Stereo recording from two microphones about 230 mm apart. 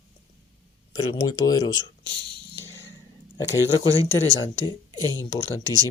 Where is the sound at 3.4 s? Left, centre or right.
Centre.